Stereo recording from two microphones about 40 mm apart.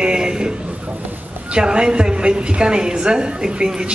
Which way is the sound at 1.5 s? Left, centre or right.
Right.